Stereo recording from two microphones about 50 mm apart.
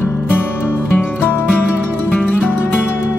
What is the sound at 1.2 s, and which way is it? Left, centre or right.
Music, left.